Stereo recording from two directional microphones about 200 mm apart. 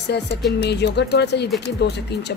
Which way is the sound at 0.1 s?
60° left (ahead or behind).